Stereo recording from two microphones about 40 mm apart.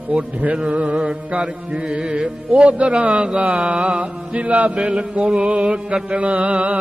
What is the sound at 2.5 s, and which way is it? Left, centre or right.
Speech, right.